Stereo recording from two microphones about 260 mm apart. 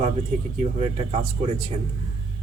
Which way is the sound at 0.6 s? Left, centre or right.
Right.